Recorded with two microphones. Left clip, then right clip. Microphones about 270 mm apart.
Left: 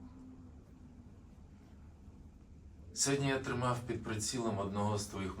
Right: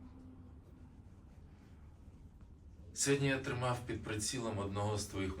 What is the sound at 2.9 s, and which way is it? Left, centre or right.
Speech, left.